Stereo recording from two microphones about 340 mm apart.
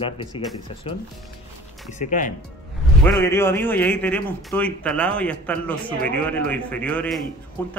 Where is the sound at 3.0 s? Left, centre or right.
Centre.